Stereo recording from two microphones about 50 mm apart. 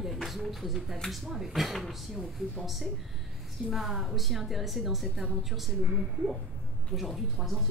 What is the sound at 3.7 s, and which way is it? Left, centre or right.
A woman's voice, centre.